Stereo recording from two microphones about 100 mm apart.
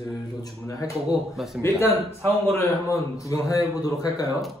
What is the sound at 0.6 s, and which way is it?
Speech, 30° left (ahead or behind).